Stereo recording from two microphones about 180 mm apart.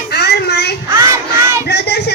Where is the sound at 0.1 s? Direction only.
65° left (ahead or behind).